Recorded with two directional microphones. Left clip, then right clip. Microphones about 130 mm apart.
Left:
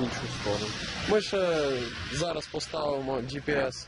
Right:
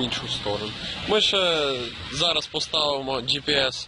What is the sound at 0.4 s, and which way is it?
Speech, 35° right (ahead or behind).